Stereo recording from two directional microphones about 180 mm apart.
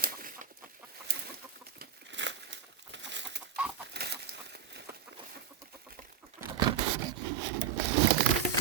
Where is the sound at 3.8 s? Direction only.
65° right (ahead or behind).